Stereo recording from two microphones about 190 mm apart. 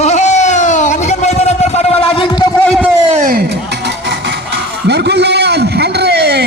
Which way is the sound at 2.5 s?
5° left (ahead or behind).